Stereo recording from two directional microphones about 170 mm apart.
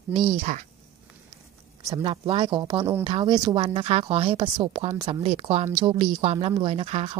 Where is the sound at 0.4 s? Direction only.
50° right (ahead or behind).